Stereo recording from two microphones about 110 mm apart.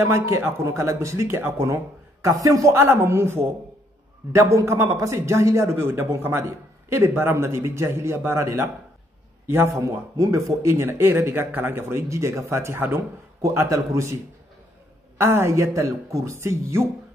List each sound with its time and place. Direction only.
0.1 s a man's voice: 25° right (ahead or behind)
15.1 s a man's voice: 25° right (ahead or behind)